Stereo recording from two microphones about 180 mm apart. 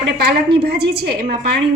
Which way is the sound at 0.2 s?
65° right (ahead or behind).